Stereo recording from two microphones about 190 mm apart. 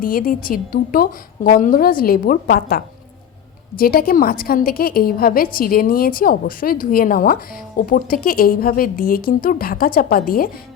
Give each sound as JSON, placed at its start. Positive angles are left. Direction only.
{"t": 0.0, "sound": "a woman's voice", "side_deg": 50}